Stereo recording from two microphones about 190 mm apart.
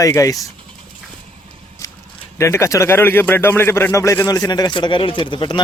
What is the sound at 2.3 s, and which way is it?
Speech, 15° left (ahead or behind).